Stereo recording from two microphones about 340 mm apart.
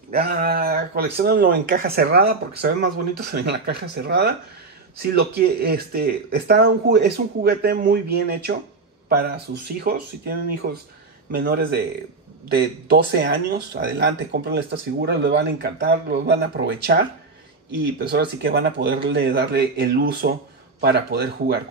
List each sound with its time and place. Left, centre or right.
0.1 s speech: right
18.0 s speech: right